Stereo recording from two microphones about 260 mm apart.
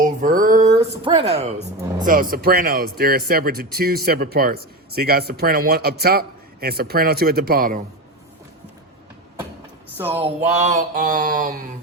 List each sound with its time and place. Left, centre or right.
0.0 s a sound: right
2.3 s speech: right
10.2 s mantra: right